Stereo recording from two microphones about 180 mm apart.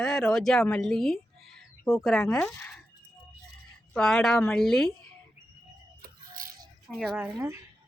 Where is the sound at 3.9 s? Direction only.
Centre (ahead or behind).